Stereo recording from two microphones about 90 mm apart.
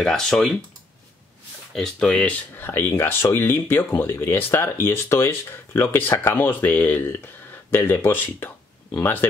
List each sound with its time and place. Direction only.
0.0 s speech: 5° left (ahead or behind)
1.7 s speech: 5° left (ahead or behind)
2.5 s speech: 25° left (ahead or behind)